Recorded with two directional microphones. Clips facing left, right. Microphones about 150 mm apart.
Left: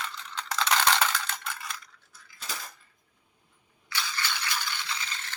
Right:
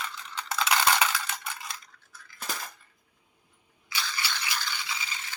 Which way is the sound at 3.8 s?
10° right (ahead or behind).